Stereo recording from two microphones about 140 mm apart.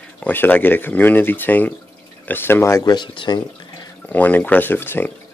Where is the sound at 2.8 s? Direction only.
30° left (ahead or behind).